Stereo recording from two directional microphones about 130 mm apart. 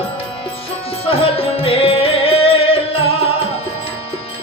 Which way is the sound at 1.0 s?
45° left (ahead or behind).